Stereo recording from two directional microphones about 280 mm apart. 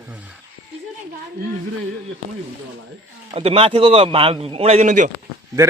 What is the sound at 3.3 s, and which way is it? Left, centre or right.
A man's voice, right.